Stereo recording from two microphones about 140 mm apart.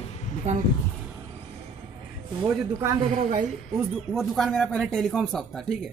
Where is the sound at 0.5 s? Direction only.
50° right (ahead or behind).